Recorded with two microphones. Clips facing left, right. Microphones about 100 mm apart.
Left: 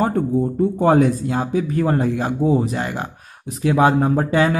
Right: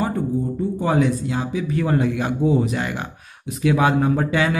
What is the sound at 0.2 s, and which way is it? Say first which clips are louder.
Speech: left 4 dB; 55° left (ahead or behind).